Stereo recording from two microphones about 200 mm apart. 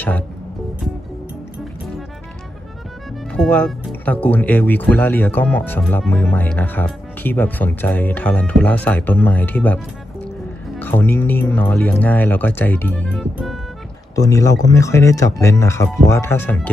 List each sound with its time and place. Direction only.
3.3 s speech: 5° left (ahead or behind)
10.8 s speech: 10° left (ahead or behind)